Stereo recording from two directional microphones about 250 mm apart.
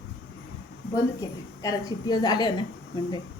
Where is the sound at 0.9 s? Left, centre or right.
Centre.